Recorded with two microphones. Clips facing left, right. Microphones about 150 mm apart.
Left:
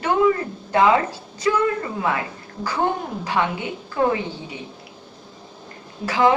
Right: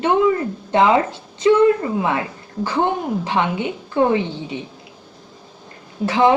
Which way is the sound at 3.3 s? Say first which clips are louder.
Even; 25° right (ahead or behind).